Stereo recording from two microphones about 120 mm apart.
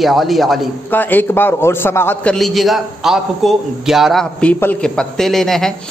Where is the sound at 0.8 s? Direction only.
15° left (ahead or behind).